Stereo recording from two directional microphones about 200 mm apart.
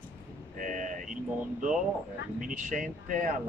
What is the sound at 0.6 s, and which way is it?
Speech, 40° right (ahead or behind).